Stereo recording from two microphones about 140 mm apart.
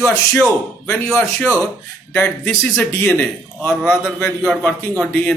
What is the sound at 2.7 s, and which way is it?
A man's voice, 15° left (ahead or behind).